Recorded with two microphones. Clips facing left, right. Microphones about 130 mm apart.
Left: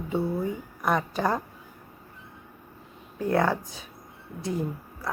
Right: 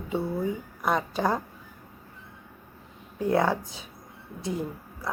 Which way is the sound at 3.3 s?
10° right (ahead or behind).